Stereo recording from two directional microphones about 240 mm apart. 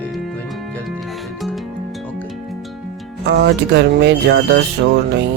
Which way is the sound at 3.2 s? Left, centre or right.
Right.